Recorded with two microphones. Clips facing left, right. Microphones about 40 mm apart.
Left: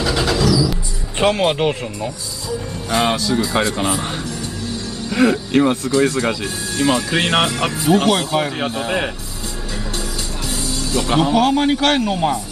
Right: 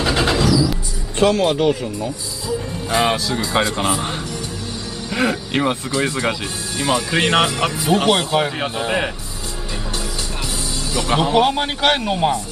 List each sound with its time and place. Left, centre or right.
0.0 s vehicle: right
1.2 s speech: left
2.9 s speech: centre
5.1 s speech: centre
10.9 s a man's voice: centre